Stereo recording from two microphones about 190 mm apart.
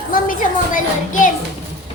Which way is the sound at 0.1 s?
45° left (ahead or behind).